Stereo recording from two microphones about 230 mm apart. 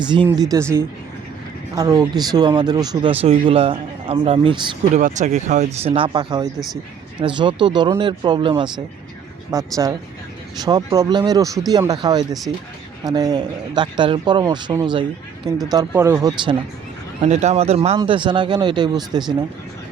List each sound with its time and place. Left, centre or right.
0.1 s speech: centre
17.2 s speech: right